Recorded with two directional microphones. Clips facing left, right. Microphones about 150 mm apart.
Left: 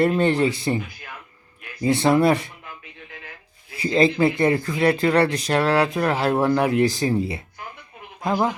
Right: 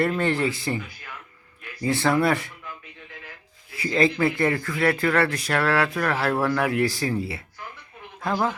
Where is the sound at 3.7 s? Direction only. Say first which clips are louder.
Left 3 dB; 20° left (ahead or behind).